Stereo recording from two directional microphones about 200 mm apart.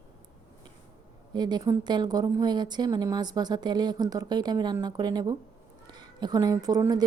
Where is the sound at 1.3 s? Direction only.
20° right (ahead or behind).